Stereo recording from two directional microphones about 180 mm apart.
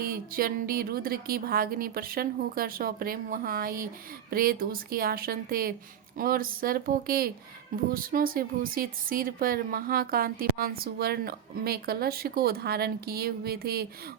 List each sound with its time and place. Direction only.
0.0 s a woman's voice: 55° right (ahead or behind)